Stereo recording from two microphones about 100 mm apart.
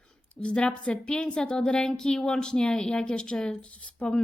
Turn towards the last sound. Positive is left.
turn(degrees=15)  # may be behind; listen again after turning